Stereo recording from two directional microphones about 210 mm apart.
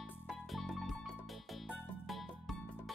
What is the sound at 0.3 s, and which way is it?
Music, centre (ahead or behind).